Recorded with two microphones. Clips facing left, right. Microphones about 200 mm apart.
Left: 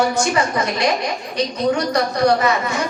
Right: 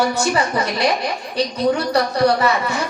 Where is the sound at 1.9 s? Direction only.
35° right (ahead or behind).